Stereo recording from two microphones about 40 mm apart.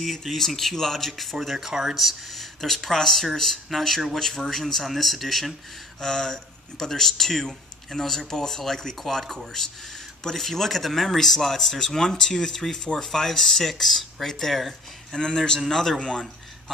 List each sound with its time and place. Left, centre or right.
0.0 s speech: centre
2.0 s speech: centre
15.1 s a man's voice: centre
16.0 s a man's voice: left